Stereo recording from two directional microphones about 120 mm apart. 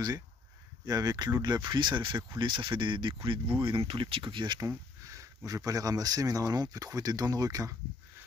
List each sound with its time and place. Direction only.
0.8 s speech: 30° right (ahead or behind)
4.6 s a sound: 30° right (ahead or behind)
5.7 s speech: 30° right (ahead or behind)